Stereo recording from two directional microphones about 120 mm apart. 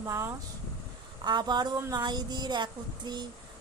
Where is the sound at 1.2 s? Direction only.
35° right (ahead or behind).